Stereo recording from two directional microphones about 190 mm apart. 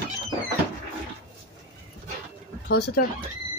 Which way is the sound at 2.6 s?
55° left (ahead or behind).